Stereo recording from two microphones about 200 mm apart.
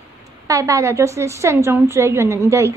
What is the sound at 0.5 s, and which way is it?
A woman's voice, 15° right (ahead or behind).